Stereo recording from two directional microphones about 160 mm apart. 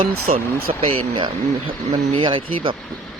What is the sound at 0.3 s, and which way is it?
Speech, 35° right (ahead or behind).